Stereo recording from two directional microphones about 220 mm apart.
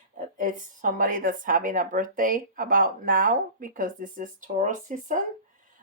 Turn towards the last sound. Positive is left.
turn(degrees=-35)  # may be behind; listen again after turning